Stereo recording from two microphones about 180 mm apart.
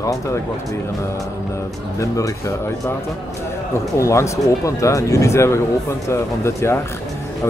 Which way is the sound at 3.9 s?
15° left (ahead or behind).